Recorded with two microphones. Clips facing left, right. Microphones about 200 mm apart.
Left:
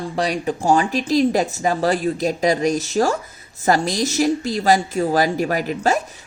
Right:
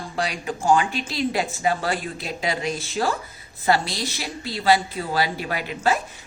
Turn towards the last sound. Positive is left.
turn(degrees=40)  # may be behind; listen again after turning